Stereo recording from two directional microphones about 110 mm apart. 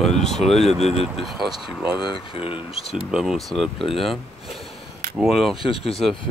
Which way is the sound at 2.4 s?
55° left (ahead or behind).